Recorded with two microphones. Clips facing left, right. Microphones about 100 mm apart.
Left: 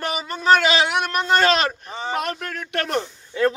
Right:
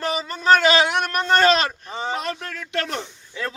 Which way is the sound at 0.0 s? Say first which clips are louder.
Right 2 dB; 10° left (ahead or behind).